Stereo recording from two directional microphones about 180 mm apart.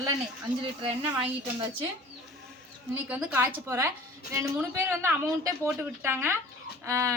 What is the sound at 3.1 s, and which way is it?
A woman's voice, 5° right (ahead or behind).